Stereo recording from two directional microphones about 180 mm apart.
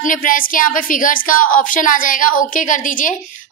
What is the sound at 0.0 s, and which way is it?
A woman's voice, 50° left (ahead or behind).